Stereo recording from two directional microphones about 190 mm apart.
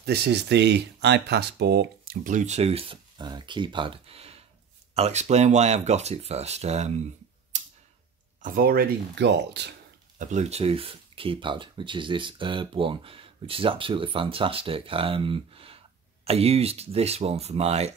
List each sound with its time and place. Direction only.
0.0 s speech: 60° right (ahead or behind)
2.2 s speech: 40° right (ahead or behind)
7.5 s a sound: 40° right (ahead or behind)
8.4 s speech: 45° right (ahead or behind); by 9.8 s 65° right (ahead or behind)
10.1 s speech: 40° right (ahead or behind)